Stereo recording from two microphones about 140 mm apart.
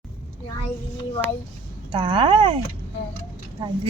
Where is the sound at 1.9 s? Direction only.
35° right (ahead or behind).